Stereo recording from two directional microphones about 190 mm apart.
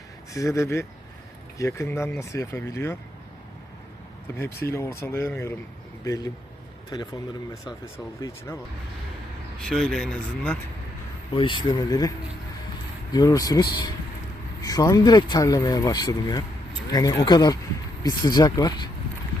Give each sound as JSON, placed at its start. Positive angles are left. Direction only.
{"t": 0.3, "sound": "speech", "side_deg": 15}
{"t": 4.4, "sound": "speech", "side_deg": 15}
{"t": 9.6, "sound": "speech", "side_deg": 5}
{"t": 11.3, "sound": "speech", "side_deg": 25}
{"t": 13.1, "sound": "speech", "side_deg": 20}